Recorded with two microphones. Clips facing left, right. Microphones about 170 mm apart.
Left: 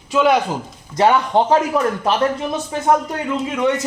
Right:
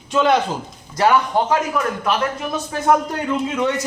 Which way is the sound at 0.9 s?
25° left (ahead or behind).